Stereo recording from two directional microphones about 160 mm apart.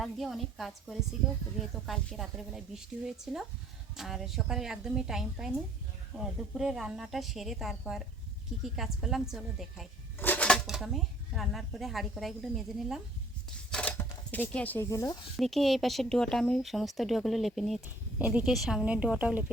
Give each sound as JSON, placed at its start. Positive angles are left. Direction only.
{"t": 0.0, "sound": "speech", "side_deg": 0}
{"t": 10.2, "sound": "speech", "side_deg": 10}
{"t": 13.7, "sound": "a sound", "side_deg": 5}
{"t": 14.8, "sound": "speech", "side_deg": 20}
{"t": 15.4, "sound": "speech", "side_deg": 0}
{"t": 17.8, "sound": "speech", "side_deg": -10}